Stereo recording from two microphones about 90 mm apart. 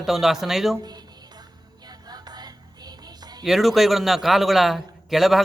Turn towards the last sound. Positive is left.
turn(degrees=0)  # may be behind; listen again after turning